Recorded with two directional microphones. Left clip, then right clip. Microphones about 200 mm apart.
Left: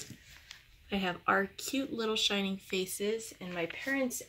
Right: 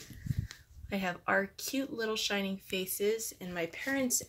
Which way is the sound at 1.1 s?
5° right (ahead or behind).